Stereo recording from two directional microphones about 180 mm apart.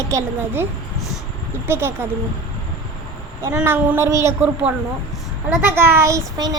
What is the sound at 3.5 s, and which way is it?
A woman's voice, 10° right (ahead or behind).